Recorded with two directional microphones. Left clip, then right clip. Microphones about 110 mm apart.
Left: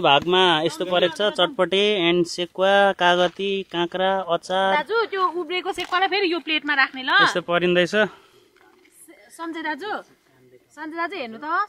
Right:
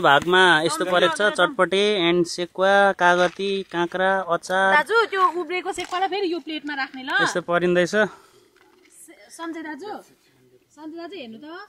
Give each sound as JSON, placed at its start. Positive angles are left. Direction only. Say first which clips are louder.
{"t": 0.4, "sound": "a woman's voice", "louder": "right 2 dB", "side_deg": 0}
{"t": 7.3, "sound": "speech", "louder": "even", "side_deg": 0}
{"t": 9.4, "sound": "a woman's voice", "louder": "left 4 dB", "side_deg": 10}